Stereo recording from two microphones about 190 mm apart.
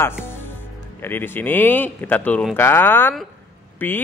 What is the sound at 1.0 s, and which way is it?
Speech, 10° left (ahead or behind).